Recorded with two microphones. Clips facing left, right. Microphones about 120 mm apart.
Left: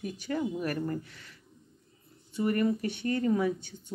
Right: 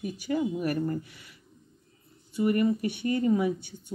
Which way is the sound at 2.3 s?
5° right (ahead or behind).